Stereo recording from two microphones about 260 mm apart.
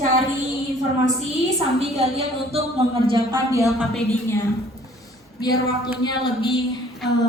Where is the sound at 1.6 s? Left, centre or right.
Right.